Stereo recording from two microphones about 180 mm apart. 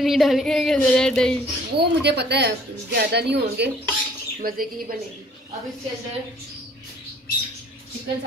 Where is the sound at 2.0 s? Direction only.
70° right (ahead or behind).